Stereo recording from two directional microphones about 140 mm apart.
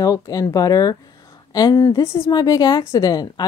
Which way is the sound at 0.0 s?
25° left (ahead or behind).